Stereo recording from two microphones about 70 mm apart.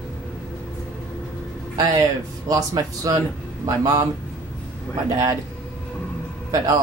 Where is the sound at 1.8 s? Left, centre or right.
Right.